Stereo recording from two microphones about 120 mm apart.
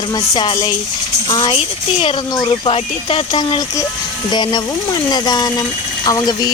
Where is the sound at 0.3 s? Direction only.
35° left (ahead or behind).